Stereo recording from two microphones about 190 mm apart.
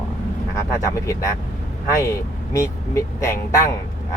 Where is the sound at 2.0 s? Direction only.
15° left (ahead or behind).